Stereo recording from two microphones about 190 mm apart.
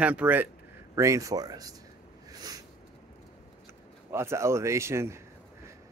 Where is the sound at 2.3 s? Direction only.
20° right (ahead or behind).